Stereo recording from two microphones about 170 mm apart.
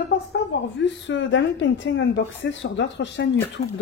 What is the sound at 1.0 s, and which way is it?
A woman's voice, 90° left.